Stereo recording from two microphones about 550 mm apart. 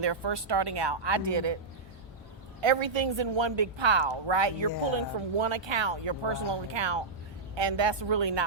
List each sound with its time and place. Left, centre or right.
0.0 s speech: right
2.6 s speech: right